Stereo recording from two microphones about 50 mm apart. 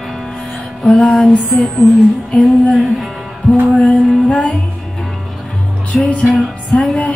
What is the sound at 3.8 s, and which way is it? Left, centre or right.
Music, left.